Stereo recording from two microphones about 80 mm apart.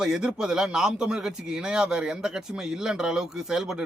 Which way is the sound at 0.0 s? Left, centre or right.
Centre.